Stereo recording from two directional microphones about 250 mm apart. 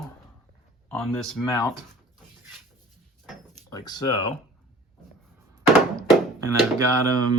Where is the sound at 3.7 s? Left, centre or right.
Centre.